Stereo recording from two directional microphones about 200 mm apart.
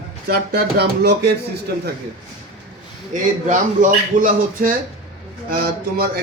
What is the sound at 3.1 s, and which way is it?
A man's voice, 40° right (ahead or behind).